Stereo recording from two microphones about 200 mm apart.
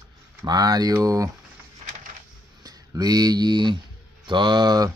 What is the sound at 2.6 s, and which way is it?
Speech, 20° right (ahead or behind).